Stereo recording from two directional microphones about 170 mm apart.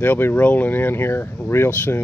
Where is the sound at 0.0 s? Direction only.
10° left (ahead or behind).